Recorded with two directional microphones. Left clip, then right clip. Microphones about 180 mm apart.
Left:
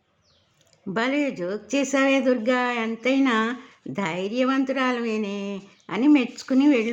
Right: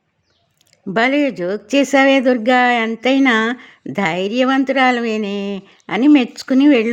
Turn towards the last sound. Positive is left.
turn(degrees=-40)  # may be behind; listen again after turning